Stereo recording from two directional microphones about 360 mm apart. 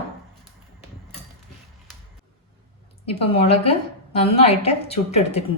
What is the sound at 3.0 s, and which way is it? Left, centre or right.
A woman's voice, centre.